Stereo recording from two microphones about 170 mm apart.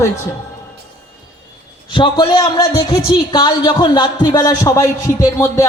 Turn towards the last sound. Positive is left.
turn(degrees=20)  # may be behind; listen again after turning